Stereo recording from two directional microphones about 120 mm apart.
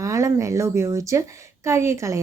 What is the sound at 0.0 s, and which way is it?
A woman's voice, 25° right (ahead or behind).